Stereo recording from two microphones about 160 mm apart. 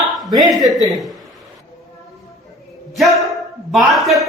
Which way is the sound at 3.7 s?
Centre (ahead or behind).